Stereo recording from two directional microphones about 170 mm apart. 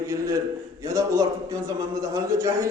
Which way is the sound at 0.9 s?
20° right (ahead or behind).